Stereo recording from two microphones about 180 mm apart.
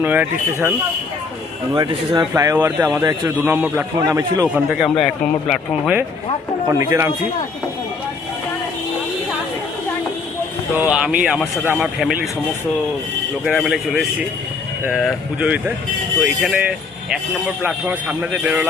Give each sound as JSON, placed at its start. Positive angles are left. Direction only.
{"t": 0.0, "sound": "a man's voice", "side_deg": -10}
{"t": 1.7, "sound": "a man's voice", "side_deg": -25}
{"t": 4.4, "sound": "speech", "side_deg": -5}
{"t": 6.7, "sound": "a man's voice", "side_deg": -15}
{"t": 10.8, "sound": "speech", "side_deg": -5}
{"t": 13.4, "sound": "a man's voice", "side_deg": 0}